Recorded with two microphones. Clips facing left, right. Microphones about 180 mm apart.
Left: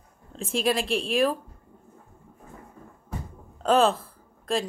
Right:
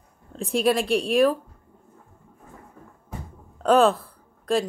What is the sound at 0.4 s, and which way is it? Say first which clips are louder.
Speech: right 4 dB; centre (ahead or behind).